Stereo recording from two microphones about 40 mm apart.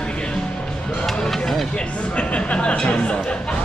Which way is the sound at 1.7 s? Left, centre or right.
Left.